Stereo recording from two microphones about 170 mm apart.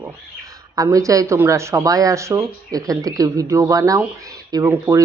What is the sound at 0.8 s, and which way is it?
Speech, 20° right (ahead or behind).